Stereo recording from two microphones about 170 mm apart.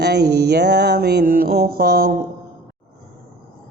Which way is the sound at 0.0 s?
75° right (ahead or behind).